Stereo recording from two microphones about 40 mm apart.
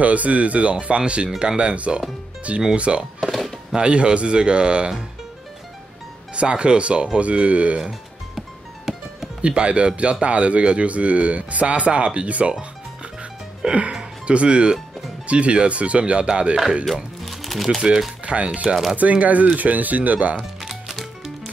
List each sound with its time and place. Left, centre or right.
0.0 s speech: right
3.2 s music: centre
3.7 s speech: right
6.3 s speech: right
8.4 s music: centre
9.4 s speech: right
13.7 s speech: right
16.8 s music: centre
18.2 s speech: right
18.9 s speech: right
20.6 s music: centre